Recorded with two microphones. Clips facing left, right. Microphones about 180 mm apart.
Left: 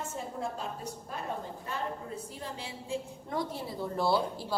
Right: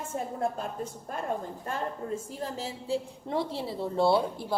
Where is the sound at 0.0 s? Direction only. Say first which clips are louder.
Right 5 dB; 55° right (ahead or behind).